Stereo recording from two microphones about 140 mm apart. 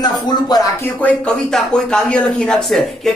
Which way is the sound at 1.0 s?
5° left (ahead or behind).